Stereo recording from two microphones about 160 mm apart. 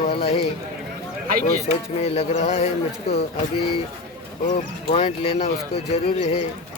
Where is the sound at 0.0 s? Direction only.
40° left (ahead or behind).